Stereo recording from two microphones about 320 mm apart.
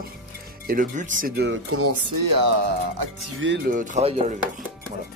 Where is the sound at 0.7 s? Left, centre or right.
Right.